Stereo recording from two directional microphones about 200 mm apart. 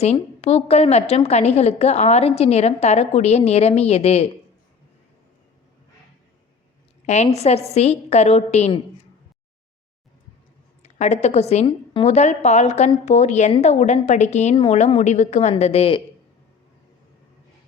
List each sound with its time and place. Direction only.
0.0 s a woman's voice: 30° left (ahead or behind)
7.0 s a woman's voice: 35° left (ahead or behind)
10.8 s a woman's voice: 35° left (ahead or behind)